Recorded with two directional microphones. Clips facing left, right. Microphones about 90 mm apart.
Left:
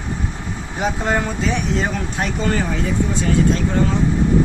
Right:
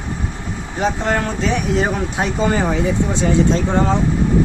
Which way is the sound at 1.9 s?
15° right (ahead or behind).